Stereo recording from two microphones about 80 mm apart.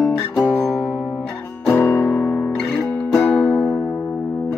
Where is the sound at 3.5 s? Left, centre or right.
Centre.